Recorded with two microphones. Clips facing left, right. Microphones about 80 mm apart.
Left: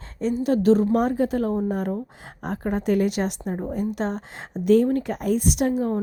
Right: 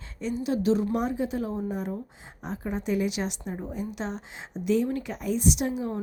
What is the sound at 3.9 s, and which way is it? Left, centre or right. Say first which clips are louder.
A woman's voice: left 6 dB; left.